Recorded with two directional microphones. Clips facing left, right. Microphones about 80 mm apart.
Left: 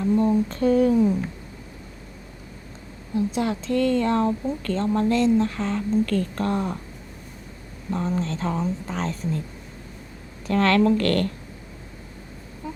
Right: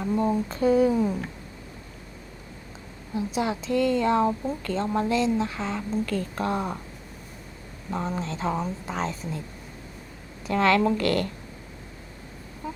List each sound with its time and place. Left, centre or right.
0.0 s speech: centre
3.2 s speech: centre
7.9 s speech: centre
10.4 s speech: centre
12.6 s a sound: centre